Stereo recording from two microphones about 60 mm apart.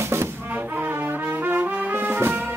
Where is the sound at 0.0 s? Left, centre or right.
Right.